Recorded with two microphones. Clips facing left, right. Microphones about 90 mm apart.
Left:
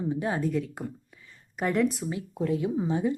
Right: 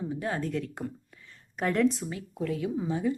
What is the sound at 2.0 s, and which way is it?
Speech, 20° left (ahead or behind).